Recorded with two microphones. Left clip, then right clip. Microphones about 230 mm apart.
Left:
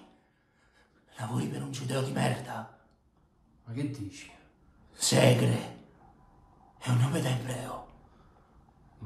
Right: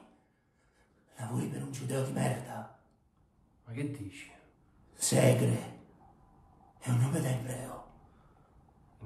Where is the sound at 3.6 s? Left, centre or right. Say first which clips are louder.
Left 3 dB; centre.